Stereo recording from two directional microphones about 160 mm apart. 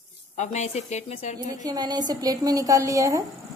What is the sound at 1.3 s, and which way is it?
Speech, 25° right (ahead or behind).